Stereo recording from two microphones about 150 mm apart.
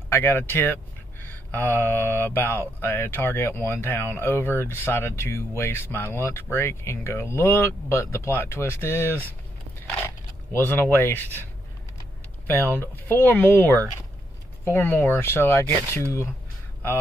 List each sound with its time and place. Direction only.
0.1 s speech: 15° left (ahead or behind)
12.4 s speech: 15° left (ahead or behind)